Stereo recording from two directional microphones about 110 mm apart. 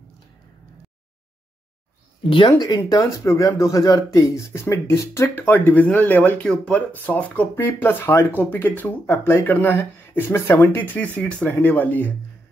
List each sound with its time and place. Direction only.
2.2 s speech: 45° left (ahead or behind)
2.9 s speech: 30° left (ahead or behind)